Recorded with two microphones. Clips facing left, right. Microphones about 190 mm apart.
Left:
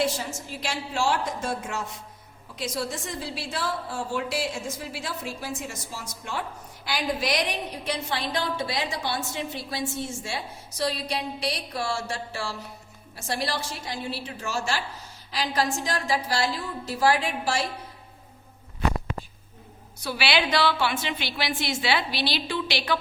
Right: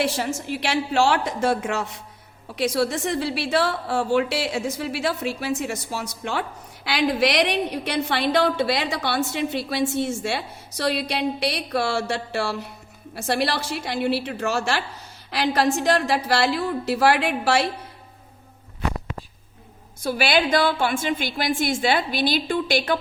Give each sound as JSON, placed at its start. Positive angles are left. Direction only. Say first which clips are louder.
{"t": 0.0, "sound": "a woman's voice", "louder": "right 3 dB", "side_deg": -70}
{"t": 20.0, "sound": "a woman's voice", "louder": "right 5 dB", "side_deg": -50}